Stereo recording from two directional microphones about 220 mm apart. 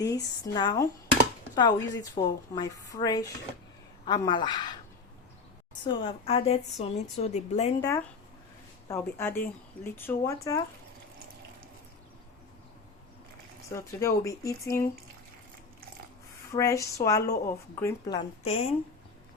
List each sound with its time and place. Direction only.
0.0 s a woman's voice: 15° left (ahead or behind)
5.8 s a woman's voice: 20° left (ahead or behind)
7.8 s a woman's voice: 15° left (ahead or behind)
13.7 s a woman's voice: 15° left (ahead or behind)
16.5 s a woman's voice: 15° left (ahead or behind)